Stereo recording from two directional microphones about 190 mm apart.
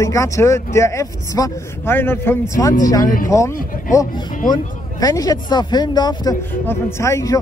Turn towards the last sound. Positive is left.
turn(degrees=15)  # may be behind; listen again after turning